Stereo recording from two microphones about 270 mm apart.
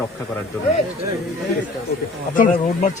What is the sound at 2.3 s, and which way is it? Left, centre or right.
Speech, left.